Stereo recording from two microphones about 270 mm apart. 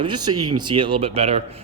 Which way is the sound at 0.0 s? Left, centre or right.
Centre.